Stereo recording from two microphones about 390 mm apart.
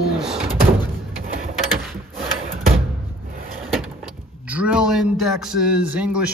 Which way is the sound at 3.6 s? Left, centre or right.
Centre.